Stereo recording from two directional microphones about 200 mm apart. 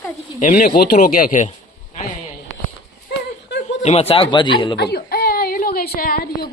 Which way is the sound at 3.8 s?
30° left (ahead or behind).